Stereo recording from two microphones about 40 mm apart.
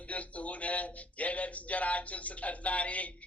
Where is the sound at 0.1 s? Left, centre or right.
Left.